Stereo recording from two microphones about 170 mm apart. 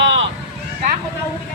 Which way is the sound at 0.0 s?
90° right.